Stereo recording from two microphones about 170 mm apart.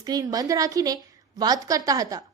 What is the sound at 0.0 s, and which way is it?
A woman's voice, 20° right (ahead or behind).